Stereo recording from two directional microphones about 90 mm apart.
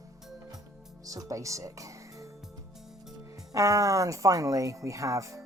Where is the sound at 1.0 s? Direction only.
40° right (ahead or behind).